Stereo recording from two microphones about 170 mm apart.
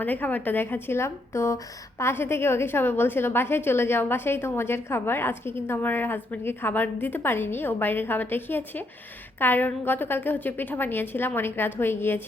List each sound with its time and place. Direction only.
0.0 s a woman's voice: 10° left (ahead or behind)